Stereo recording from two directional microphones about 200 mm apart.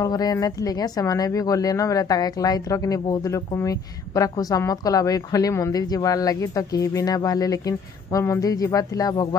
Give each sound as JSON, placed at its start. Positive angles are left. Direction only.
{"t": 0.0, "sound": "speech", "side_deg": 20}